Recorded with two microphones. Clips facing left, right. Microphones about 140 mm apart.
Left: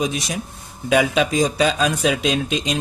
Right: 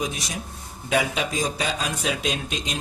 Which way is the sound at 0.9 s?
90° left.